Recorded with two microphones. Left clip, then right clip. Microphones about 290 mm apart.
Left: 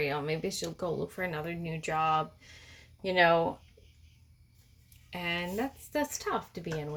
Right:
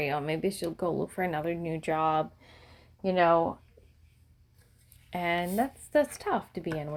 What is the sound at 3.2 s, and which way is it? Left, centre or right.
Speech, centre.